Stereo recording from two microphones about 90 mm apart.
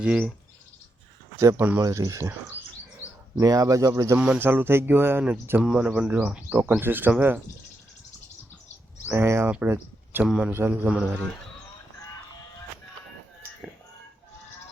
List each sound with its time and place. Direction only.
0.0 s speech: 10° right (ahead or behind)
1.4 s speech: 35° right (ahead or behind)
3.4 s speech: 40° right (ahead or behind)
4.4 s speech: 25° right (ahead or behind)
5.6 s speech: 10° right (ahead or behind)
9.1 s speech: 30° right (ahead or behind)
9.6 s a sound: 25° right (ahead or behind)
10.2 s speech: 10° right (ahead or behind)
10.5 s speech: 25° right (ahead or behind)
10.8 s speech: 5° right (ahead or behind)